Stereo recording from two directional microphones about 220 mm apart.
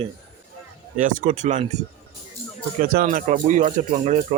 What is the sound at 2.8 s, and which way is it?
Speech, 35° right (ahead or behind).